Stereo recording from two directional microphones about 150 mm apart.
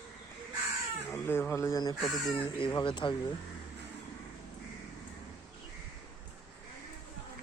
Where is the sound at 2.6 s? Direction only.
30° left (ahead or behind).